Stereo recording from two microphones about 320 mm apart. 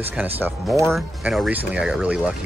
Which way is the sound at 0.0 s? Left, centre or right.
Centre.